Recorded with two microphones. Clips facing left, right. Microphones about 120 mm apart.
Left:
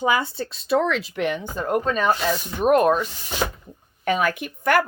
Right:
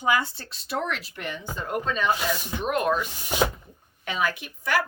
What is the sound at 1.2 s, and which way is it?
Speech, 75° left (ahead or behind).